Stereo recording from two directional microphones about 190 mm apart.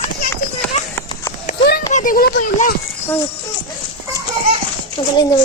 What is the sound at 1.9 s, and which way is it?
Speech, 45° left (ahead or behind).